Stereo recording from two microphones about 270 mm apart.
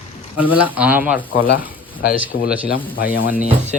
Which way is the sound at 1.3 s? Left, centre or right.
Left.